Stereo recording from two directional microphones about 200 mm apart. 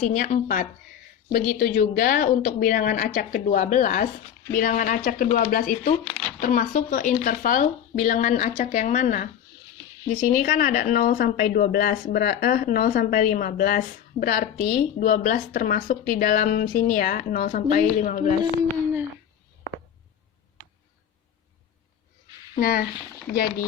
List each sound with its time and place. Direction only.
0.0 s speech: 35° left (ahead or behind)
22.5 s speech: 45° left (ahead or behind)